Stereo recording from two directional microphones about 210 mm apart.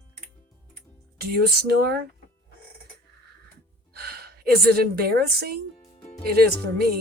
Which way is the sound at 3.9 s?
50° right (ahead or behind).